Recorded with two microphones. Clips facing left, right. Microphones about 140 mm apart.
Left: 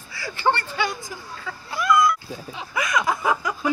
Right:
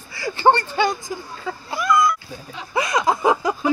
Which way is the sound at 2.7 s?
25° right (ahead or behind).